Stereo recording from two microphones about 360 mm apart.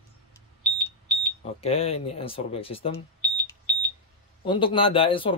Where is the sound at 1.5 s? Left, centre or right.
Centre.